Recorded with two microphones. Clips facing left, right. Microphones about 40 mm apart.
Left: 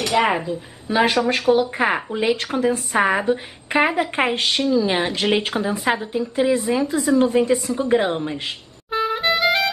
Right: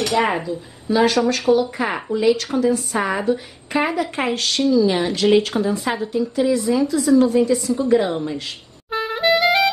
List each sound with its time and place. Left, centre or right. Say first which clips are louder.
0.1 s a woman's voice: even; centre
0.8 s a woman's voice: right 1 dB; left
8.9 s music: right 2 dB; centre